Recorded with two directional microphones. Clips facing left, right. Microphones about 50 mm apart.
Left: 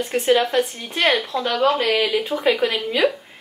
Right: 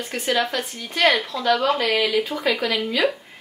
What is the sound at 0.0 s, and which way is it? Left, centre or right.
A woman's voice, left.